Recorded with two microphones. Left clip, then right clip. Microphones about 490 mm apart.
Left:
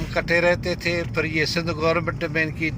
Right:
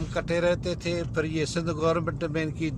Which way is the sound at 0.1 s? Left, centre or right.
Right.